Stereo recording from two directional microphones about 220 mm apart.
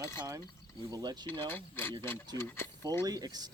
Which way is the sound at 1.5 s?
10° left (ahead or behind).